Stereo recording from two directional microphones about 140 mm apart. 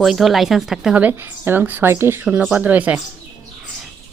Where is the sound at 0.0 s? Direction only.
Centre (ahead or behind).